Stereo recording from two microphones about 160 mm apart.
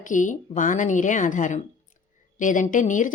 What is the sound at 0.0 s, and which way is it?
A woman's voice, 55° left (ahead or behind).